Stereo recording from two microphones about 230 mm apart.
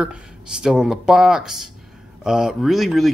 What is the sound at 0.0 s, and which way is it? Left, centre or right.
Speech, centre.